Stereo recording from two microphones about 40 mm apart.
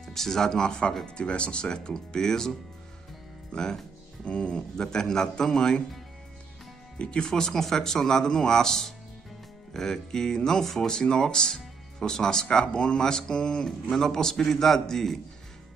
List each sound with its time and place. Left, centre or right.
0.0 s speech: centre
3.5 s speech: centre
4.2 s speech: left
4.8 s speech: centre
7.0 s speech: left
7.2 s speech: centre